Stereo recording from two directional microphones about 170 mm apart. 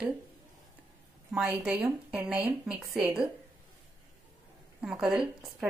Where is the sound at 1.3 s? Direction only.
5° right (ahead or behind).